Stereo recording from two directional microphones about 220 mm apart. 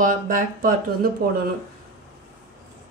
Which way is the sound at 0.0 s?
35° right (ahead or behind).